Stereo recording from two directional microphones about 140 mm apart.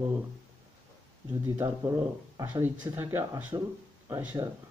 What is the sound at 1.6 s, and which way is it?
Speech, 20° right (ahead or behind).